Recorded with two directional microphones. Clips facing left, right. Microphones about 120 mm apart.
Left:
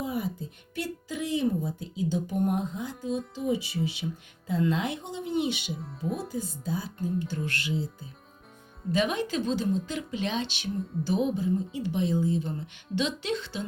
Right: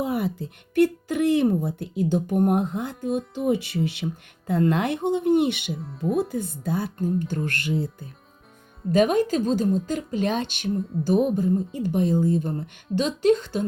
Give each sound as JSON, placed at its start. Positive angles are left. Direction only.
{"t": 0.0, "sound": "speech", "side_deg": -70}
{"t": 8.9, "sound": "speech", "side_deg": -45}